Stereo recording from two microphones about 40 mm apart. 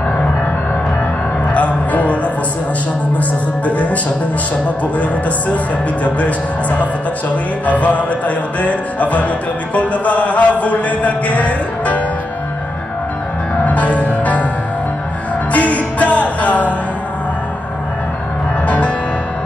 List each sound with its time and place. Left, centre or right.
1.5 s music: left
6.0 s speech: left
7.6 s music: left
13.7 s music: left
15.5 s music: left